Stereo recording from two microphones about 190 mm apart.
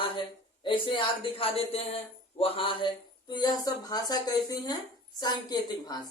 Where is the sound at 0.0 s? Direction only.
25° left (ahead or behind).